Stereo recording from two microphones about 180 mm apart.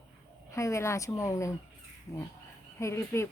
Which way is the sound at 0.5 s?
15° left (ahead or behind).